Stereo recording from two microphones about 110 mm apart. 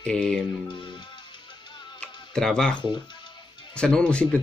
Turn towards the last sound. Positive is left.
turn(degrees=10)  # may be behind; listen again after turning